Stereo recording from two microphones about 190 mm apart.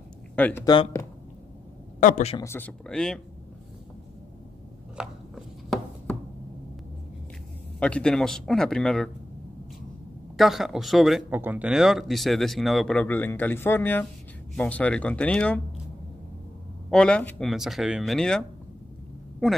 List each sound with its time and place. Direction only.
0.4 s speech: 10° left (ahead or behind)
0.7 s speech: 20° left (ahead or behind)
2.0 s a man's voice: 40° left (ahead or behind)
2.3 s speech: 15° left (ahead or behind)
4.9 s chopping: 5° right (ahead or behind)
7.8 s speech: 5° left (ahead or behind)
10.3 s speech: centre (ahead or behind)
16.9 s speech: 5° left (ahead or behind)
19.4 s speech: centre (ahead or behind)